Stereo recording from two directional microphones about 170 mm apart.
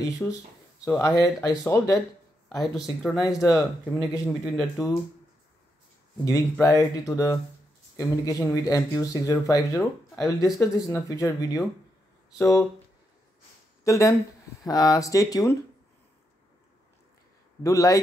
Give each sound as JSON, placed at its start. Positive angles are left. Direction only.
{"t": 0.2, "sound": "speech", "side_deg": 10}
{"t": 2.5, "sound": "speech", "side_deg": 0}
{"t": 3.1, "sound": "speech", "side_deg": 20}
{"t": 6.6, "sound": "speech", "side_deg": 20}
{"t": 13.8, "sound": "speech", "side_deg": 20}
{"t": 17.6, "sound": "speech", "side_deg": 20}